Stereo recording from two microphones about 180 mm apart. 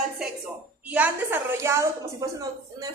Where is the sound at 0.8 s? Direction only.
10° right (ahead or behind).